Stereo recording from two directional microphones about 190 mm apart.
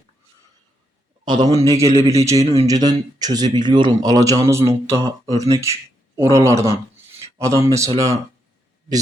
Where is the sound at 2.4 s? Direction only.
35° right (ahead or behind).